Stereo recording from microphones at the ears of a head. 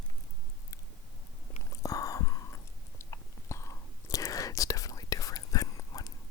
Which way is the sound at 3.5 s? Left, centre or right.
Left.